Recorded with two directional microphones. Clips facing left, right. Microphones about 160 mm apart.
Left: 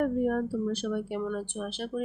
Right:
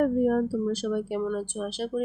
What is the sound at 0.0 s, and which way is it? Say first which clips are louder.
Speech: right 4 dB; 40° right (ahead or behind).